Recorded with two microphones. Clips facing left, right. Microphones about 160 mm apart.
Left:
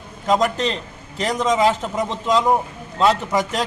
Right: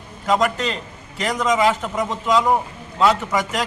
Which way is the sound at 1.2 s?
30° left (ahead or behind).